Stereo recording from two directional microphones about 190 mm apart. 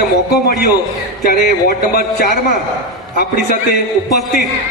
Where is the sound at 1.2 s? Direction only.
55° left (ahead or behind).